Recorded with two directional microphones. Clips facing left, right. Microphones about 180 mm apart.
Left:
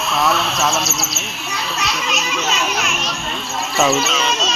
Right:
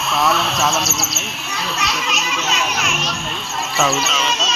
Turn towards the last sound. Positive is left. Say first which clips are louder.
# left 2 dB
turn(degrees=0)  # may be behind; listen again after turning